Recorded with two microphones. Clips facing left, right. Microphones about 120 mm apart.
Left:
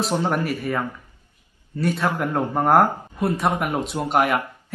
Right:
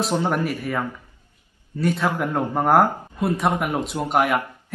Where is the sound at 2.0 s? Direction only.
15° right (ahead or behind).